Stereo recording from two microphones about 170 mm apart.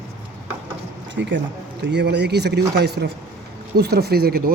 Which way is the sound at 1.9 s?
80° right.